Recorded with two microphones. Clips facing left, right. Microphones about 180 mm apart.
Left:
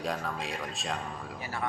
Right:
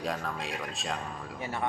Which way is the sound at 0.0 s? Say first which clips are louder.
Even; centre (ahead or behind).